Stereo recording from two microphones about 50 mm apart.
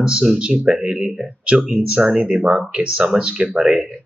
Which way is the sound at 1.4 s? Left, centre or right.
Centre.